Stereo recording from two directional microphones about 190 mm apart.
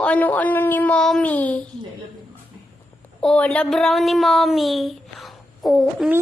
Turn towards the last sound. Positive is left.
turn(degrees=0)  # may be behind; listen again after turning